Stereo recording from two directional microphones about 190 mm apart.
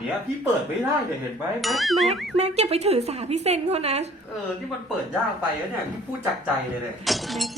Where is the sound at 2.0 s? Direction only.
35° right (ahead or behind).